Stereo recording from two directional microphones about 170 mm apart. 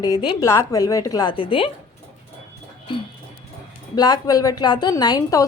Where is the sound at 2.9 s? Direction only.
30° left (ahead or behind).